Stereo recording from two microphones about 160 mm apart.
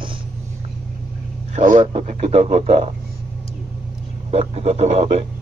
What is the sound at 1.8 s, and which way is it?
Speech, 40° right (ahead or behind).